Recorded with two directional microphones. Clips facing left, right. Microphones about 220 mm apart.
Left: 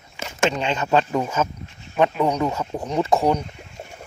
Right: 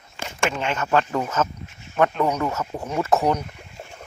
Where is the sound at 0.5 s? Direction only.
15° left (ahead or behind).